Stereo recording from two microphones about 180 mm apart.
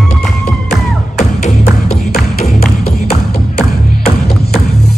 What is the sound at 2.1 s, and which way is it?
Music, 60° left (ahead or behind).